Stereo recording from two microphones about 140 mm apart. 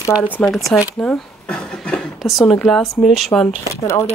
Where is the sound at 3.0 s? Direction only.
Centre (ahead or behind).